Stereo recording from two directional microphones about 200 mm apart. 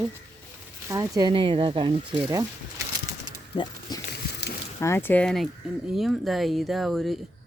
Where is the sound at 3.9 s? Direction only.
20° left (ahead or behind).